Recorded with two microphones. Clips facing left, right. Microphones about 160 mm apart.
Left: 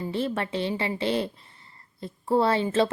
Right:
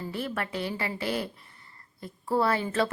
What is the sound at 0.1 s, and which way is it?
A woman's voice, 25° left (ahead or behind).